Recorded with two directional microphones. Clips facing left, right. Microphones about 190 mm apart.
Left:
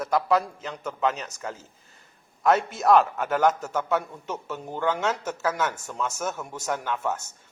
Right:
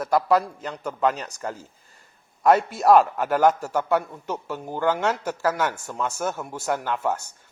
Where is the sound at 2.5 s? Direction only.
5° right (ahead or behind).